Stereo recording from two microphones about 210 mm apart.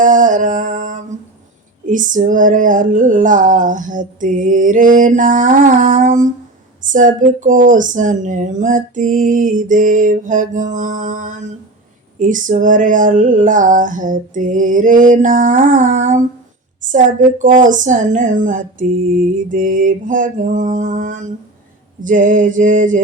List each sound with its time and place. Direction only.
0.0 s music: 40° right (ahead or behind)
1.9 s speech: 40° right (ahead or behind)